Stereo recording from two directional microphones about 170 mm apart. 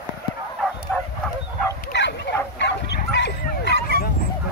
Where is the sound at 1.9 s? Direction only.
85° left.